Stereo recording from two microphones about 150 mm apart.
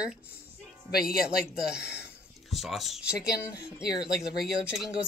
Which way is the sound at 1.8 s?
90° left.